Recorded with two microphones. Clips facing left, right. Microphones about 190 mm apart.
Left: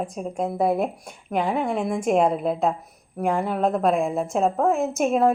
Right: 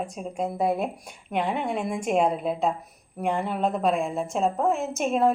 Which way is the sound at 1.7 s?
45° left (ahead or behind).